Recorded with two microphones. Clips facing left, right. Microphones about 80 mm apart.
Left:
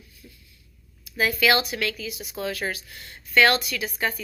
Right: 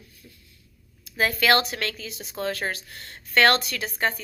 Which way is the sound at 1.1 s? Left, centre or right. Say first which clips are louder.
Right 1 dB; right.